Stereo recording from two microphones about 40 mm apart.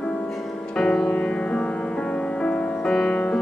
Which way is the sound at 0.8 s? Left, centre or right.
Centre.